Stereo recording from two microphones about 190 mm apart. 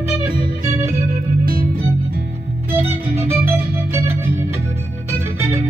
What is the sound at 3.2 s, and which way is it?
Organ, 15° right (ahead or behind).